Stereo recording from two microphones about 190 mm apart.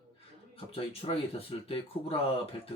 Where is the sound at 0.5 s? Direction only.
30° left (ahead or behind).